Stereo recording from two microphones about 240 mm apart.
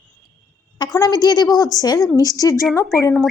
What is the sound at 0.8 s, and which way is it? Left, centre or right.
A woman's voice, centre.